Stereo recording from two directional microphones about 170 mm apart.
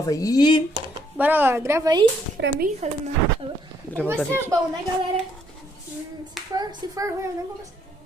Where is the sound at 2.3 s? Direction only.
60° right (ahead or behind).